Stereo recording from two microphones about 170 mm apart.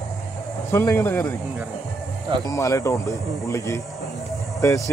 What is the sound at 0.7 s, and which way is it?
Speech, 15° left (ahead or behind).